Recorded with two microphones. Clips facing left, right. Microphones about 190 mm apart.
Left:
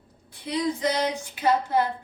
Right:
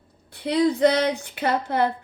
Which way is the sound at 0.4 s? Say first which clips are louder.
Right 7 dB; 65° right (ahead or behind).